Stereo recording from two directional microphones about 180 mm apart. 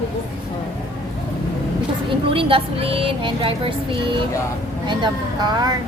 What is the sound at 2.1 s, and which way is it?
Speech, 30° right (ahead or behind).